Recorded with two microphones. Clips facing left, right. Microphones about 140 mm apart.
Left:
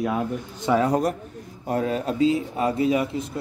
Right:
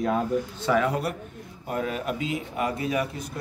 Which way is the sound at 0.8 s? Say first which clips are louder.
Left 5 dB; 40° left (ahead or behind).